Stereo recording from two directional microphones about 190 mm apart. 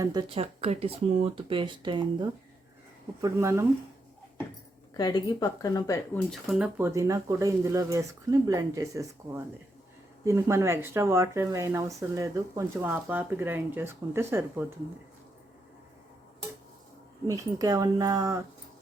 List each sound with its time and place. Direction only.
0.0 s speech: 20° right (ahead or behind)
4.9 s a woman's voice: 20° left (ahead or behind)
6.3 s speech: 5° right (ahead or behind)
17.2 s speech: 15° right (ahead or behind)